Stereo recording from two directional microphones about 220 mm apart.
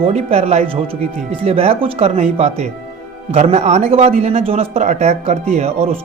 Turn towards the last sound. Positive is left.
turn(degrees=-30)  # may be behind; listen again after turning